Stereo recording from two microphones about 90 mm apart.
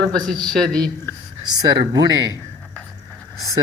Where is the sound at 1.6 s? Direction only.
45° right (ahead or behind).